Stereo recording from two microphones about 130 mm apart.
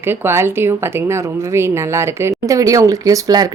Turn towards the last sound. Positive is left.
turn(degrees=-30)  # may be behind; listen again after turning